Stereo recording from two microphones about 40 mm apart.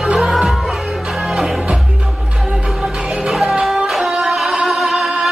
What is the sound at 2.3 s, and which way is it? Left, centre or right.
Music, centre.